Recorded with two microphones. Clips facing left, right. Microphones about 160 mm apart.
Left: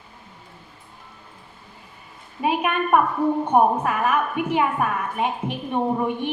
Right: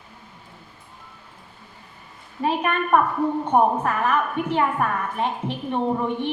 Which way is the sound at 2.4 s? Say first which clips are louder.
Left 1 dB; 10° left (ahead or behind).